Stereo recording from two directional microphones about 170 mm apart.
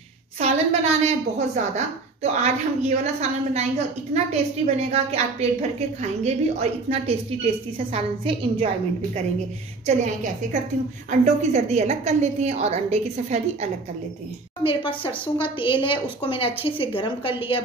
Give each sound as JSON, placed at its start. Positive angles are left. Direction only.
{"t": 0.4, "sound": "a woman's voice", "side_deg": -40}
{"t": 9.8, "sound": "a woman's voice", "side_deg": -45}
{"t": 14.6, "sound": "speech", "side_deg": 30}